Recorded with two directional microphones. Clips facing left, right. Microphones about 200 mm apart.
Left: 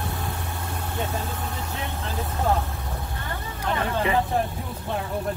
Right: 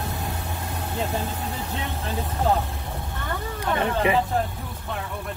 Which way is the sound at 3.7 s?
20° right (ahead or behind).